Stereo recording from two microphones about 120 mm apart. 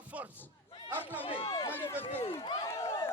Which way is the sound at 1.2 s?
50° left (ahead or behind).